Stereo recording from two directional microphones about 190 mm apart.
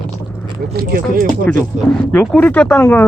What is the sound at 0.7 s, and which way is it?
Speech, 55° right (ahead or behind).